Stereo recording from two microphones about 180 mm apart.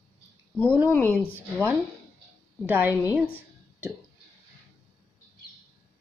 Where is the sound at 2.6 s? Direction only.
10° right (ahead or behind).